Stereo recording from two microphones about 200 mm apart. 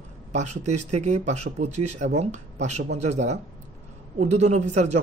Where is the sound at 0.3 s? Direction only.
35° right (ahead or behind).